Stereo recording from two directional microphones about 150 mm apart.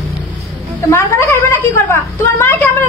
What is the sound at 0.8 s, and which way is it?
Speech, 20° left (ahead or behind).